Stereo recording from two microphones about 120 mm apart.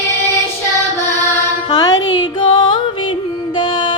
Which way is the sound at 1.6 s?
35° left (ahead or behind).